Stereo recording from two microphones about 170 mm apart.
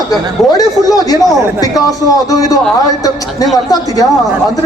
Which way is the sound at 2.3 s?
20° left (ahead or behind).